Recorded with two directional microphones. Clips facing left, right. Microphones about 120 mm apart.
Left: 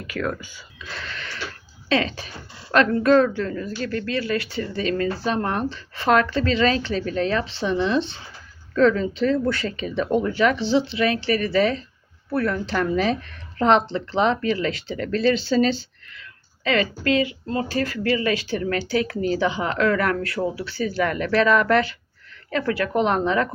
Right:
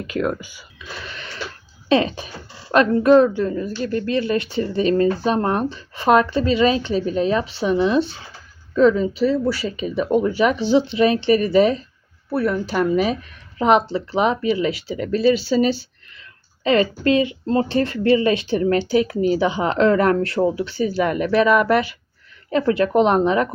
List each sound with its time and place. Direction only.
0.1 s speech: 20° right (ahead or behind)
1.0 s a sound: 15° right (ahead or behind)
1.9 s speech: 20° right (ahead or behind)
16.6 s speech: 25° right (ahead or behind)